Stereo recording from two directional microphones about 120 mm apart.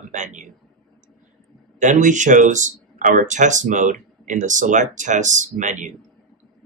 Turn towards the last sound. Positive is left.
turn(degrees=-90)